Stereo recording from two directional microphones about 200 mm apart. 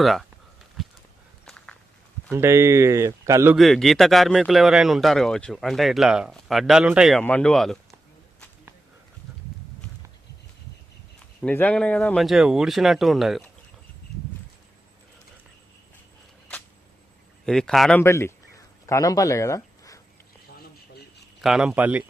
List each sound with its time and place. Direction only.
0.0 s speech: centre (ahead or behind)
0.8 s a sound: centre (ahead or behind)
2.3 s speech: 15° right (ahead or behind)
3.5 s speech: centre (ahead or behind)
11.4 s speech: 5° left (ahead or behind)
17.4 s speech: 5° left (ahead or behind)
18.0 s a sound: 15° left (ahead or behind)
21.4 s speech: 5° right (ahead or behind)